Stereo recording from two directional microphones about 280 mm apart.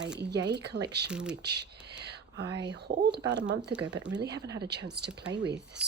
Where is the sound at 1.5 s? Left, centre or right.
Right.